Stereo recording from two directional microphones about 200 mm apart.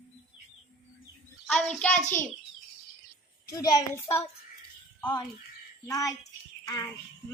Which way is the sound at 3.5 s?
15° left (ahead or behind).